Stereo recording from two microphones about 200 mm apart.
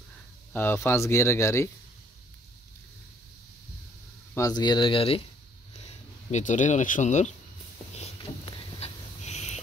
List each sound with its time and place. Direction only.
0.5 s speech: 10° left (ahead or behind)
4.3 s speech: 15° left (ahead or behind)
6.3 s speech: 40° left (ahead or behind)
8.7 s a sound: 30° left (ahead or behind)